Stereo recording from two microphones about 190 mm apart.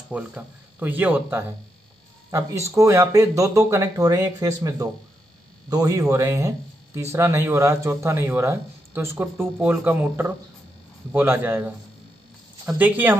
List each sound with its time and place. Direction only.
0.1 s speech: 10° right (ahead or behind)